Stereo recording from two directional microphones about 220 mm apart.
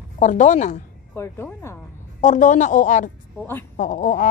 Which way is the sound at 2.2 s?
35° left (ahead or behind).